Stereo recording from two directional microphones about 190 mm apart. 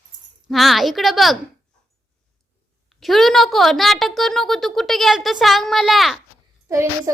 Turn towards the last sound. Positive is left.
turn(degrees=-15)  # may be behind; listen again after turning